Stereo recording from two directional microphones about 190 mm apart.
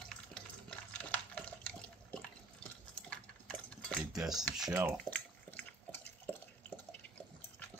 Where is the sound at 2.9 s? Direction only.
5° left (ahead or behind).